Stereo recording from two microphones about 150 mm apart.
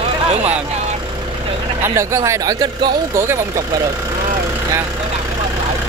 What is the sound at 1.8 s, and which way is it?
Speech, 20° right (ahead or behind).